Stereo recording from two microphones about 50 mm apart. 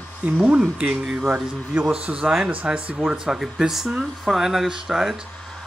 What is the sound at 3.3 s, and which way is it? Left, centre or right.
Speech, centre.